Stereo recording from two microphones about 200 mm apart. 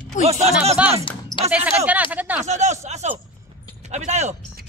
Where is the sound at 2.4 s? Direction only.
35° right (ahead or behind).